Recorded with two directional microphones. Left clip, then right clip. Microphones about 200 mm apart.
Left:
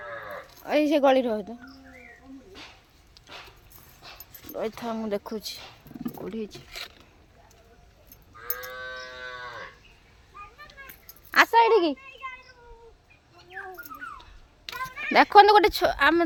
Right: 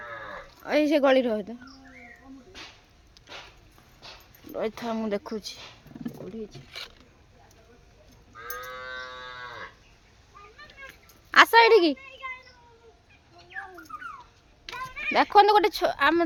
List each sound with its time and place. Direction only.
0.6 s speech: 5° right (ahead or behind)
3.2 s dog: 5° left (ahead or behind)
4.5 s speech: 10° right (ahead or behind)
6.0 s speech: 40° left (ahead or behind)
11.3 s a sound: 5° right (ahead or behind)
11.5 s a woman's voice: 15° right (ahead or behind)
14.7 s speech: 30° left (ahead or behind); by 16.2 s 15° left (ahead or behind)